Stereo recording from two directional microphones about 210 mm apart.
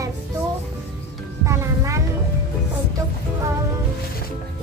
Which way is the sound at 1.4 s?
15° right (ahead or behind).